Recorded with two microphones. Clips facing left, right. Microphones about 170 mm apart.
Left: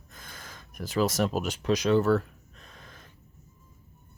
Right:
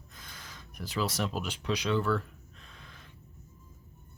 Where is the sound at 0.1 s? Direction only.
50° left (ahead or behind).